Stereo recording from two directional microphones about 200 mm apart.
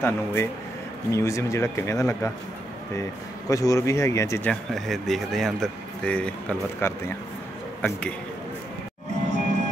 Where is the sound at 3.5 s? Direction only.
15° left (ahead or behind).